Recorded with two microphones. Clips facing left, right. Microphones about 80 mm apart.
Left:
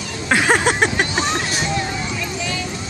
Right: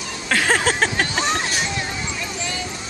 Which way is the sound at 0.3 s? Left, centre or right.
Centre.